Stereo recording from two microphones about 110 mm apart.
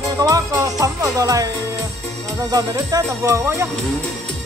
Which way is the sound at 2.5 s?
35° right (ahead or behind).